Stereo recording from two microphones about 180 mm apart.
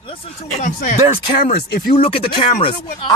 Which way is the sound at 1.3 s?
55° left (ahead or behind).